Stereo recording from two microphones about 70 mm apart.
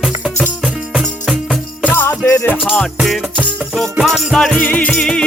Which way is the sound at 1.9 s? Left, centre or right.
Left.